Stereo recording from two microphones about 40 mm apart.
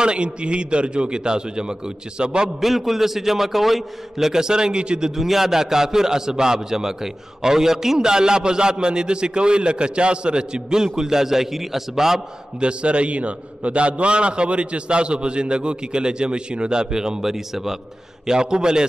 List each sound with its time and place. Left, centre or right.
0.0 s a man's voice: right
2.6 s a man's voice: centre
4.3 s a man's voice: centre
5.1 s a man's voice: centre
12.5 s a man's voice: right